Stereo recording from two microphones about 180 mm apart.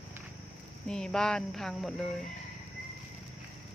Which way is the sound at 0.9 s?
5° left (ahead or behind).